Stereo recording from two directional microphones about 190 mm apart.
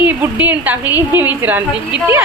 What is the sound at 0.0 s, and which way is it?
A woman's voice, 10° right (ahead or behind).